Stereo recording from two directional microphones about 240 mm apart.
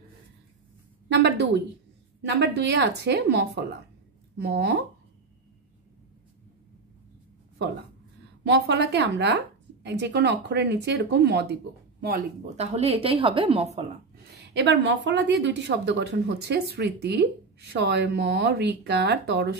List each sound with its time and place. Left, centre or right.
1.0 s a woman's voice: right
8.5 s a woman's voice: right
12.5 s a woman's voice: right
14.3 s a woman's voice: right